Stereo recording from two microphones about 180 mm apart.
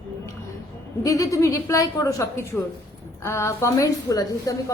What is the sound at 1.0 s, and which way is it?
A woman's voice, 20° left (ahead or behind).